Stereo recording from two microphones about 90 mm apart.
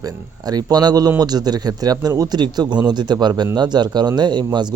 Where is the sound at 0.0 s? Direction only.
45° right (ahead or behind).